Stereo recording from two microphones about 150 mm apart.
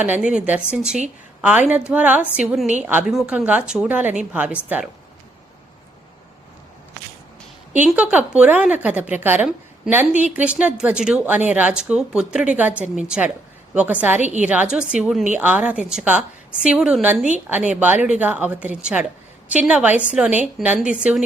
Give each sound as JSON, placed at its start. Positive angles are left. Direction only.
{"t": 0.0, "sound": "a woman's voice", "side_deg": -10}
{"t": 7.9, "sound": "a woman's voice", "side_deg": -10}
{"t": 14.2, "sound": "a woman's voice", "side_deg": -55}
{"t": 14.4, "sound": "a woman's voice", "side_deg": -10}